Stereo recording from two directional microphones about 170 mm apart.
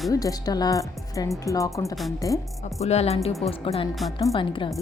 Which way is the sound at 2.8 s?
40° left (ahead or behind).